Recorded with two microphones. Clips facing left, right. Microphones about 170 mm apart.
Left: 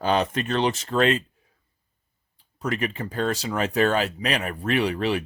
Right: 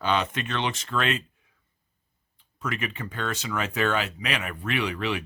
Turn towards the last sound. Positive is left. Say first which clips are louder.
# left 5 dB
turn(degrees=35)  # may be behind; listen again after turning